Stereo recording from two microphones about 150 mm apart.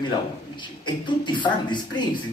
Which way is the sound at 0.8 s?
30° left (ahead or behind).